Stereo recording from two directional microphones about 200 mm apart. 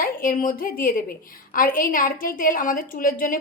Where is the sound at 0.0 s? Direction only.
45° left (ahead or behind).